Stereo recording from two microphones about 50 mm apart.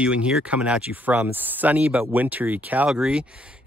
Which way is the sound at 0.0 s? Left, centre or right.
Right.